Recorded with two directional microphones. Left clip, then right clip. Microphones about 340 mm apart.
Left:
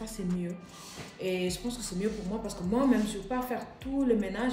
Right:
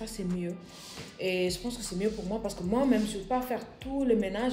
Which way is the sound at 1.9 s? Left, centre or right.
Centre.